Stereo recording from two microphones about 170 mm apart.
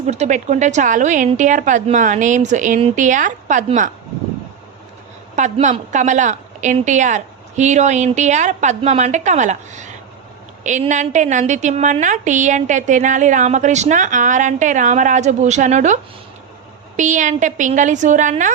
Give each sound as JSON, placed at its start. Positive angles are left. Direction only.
{"t": 0.1, "sound": "a woman's voice", "side_deg": -45}
{"t": 5.4, "sound": "a woman's voice", "side_deg": -45}
{"t": 17.0, "sound": "a woman's voice", "side_deg": -45}